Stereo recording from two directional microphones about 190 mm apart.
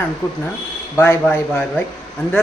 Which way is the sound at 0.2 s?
20° left (ahead or behind).